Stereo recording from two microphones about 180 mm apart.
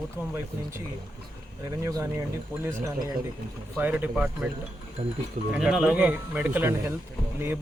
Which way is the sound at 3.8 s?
10° right (ahead or behind).